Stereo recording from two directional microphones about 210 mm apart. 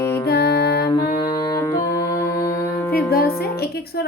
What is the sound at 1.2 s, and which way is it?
Music, 15° left (ahead or behind).